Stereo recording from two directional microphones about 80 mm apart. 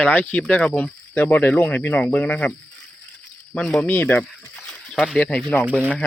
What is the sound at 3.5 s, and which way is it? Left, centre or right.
Speech, centre.